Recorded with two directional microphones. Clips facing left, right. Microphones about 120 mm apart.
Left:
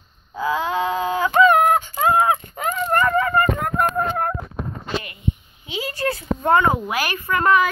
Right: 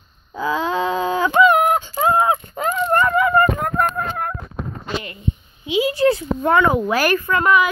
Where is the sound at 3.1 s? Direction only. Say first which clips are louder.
Right 2 dB; 40° left (ahead or behind).